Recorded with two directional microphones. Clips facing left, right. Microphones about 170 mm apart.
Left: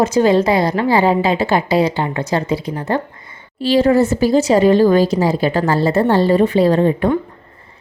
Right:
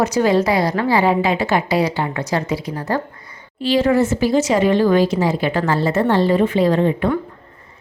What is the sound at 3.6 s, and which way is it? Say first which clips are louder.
Speech: left 3 dB; 35° left (ahead or behind).